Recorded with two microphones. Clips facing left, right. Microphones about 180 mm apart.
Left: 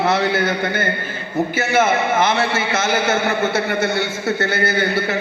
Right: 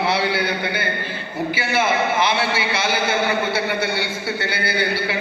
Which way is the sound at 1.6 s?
45° left (ahead or behind).